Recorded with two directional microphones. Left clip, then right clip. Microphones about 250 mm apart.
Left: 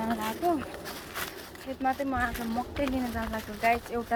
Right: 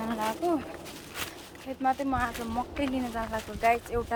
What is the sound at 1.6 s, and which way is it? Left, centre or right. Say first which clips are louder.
Speech: right 1 dB; centre.